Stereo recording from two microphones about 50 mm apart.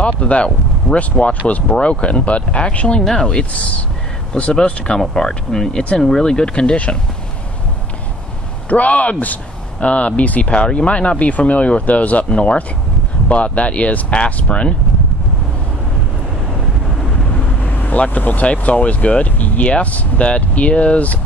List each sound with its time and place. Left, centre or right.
0.0 s speech: left
8.6 s speech: left
17.6 s speech: left